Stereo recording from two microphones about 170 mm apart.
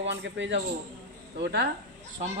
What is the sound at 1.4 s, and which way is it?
Speech, 80° right.